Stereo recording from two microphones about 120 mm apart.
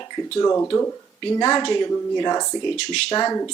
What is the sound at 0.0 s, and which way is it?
Speech, 25° left (ahead or behind).